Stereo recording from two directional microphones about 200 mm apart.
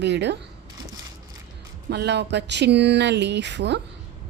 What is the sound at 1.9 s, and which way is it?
Speech, 55° right (ahead or behind).